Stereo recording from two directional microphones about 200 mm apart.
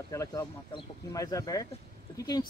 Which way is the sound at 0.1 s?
15° left (ahead or behind).